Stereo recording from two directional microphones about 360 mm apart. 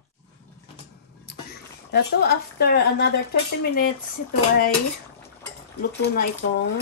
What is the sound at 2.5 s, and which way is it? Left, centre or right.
Speech, left.